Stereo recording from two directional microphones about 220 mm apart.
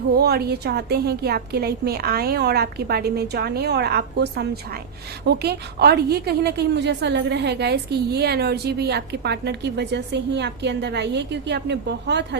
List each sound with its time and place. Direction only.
0.2 s a woman's voice: 45° right (ahead or behind)